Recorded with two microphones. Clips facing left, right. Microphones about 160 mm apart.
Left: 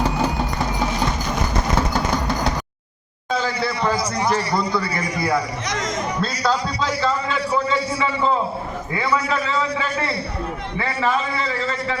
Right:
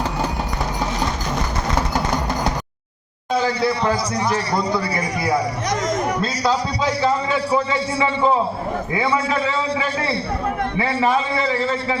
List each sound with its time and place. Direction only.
7.5 s a man's voice: 25° right (ahead or behind)
10.8 s a man's voice: 20° right (ahead or behind)